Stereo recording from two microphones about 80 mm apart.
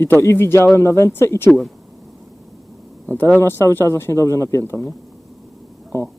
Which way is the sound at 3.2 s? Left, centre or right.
Left.